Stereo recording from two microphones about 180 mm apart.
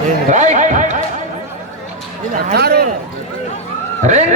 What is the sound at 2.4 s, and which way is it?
Speech, 60° right (ahead or behind).